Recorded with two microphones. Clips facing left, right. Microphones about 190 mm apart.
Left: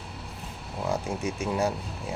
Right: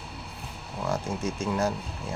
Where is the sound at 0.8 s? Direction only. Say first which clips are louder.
Even; 15° left (ahead or behind).